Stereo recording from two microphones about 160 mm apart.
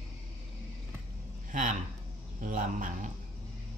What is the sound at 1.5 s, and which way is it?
Speech, 55° right (ahead or behind).